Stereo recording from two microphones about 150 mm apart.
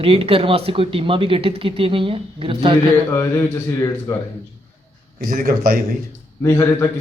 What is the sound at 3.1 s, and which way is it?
Speech, 20° left (ahead or behind).